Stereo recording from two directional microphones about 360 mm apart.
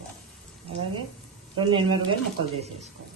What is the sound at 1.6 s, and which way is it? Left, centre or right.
Speech, centre.